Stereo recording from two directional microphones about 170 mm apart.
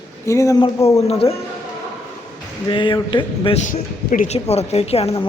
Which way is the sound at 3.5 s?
50° left (ahead or behind).